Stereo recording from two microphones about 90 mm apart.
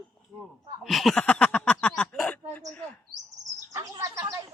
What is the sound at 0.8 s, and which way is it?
Speech, centre (ahead or behind).